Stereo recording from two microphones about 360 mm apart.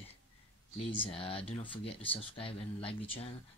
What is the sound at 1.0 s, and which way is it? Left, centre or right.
Speech, centre.